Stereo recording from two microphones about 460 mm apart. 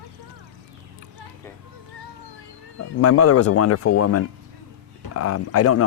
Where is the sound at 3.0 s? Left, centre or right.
Left.